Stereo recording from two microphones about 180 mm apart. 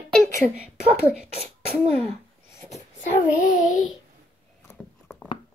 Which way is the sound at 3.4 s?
45° left (ahead or behind).